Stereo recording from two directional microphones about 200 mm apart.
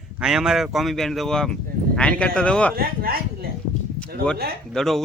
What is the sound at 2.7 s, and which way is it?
Speech, 50° right (ahead or behind).